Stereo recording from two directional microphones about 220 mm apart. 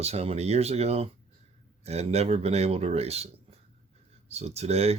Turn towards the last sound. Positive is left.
turn(degrees=-30)  # may be behind; listen again after turning